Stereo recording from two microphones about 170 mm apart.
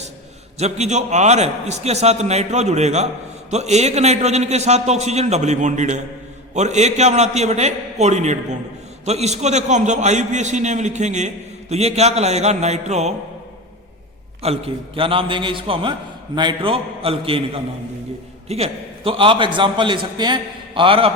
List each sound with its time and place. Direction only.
0.6 s a man's voice: 40° right (ahead or behind)
14.4 s a man's voice: 35° right (ahead or behind)